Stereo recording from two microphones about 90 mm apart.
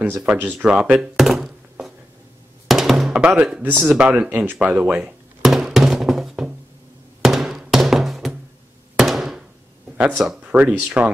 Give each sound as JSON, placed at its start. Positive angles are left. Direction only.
{"t": 0.2, "sound": "speech", "side_deg": -15}
{"t": 2.7, "sound": "music", "side_deg": 0}
{"t": 3.2, "sound": "speech", "side_deg": -15}
{"t": 5.4, "sound": "music", "side_deg": 0}
{"t": 7.2, "sound": "drum", "side_deg": 0}
{"t": 7.5, "sound": "music", "side_deg": -5}
{"t": 8.9, "sound": "thunk", "side_deg": -5}
{"t": 9.9, "sound": "speech", "side_deg": -15}